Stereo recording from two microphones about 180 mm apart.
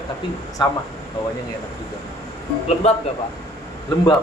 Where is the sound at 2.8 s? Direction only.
35° left (ahead or behind).